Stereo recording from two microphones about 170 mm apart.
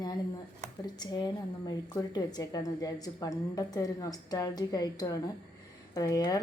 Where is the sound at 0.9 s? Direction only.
25° left (ahead or behind).